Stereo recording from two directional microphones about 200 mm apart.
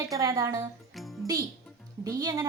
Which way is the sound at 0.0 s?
15° right (ahead or behind).